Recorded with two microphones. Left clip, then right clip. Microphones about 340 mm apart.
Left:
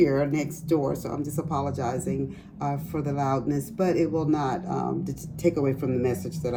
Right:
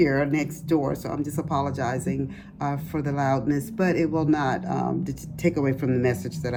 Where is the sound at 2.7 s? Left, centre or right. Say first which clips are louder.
Right 1 dB; right.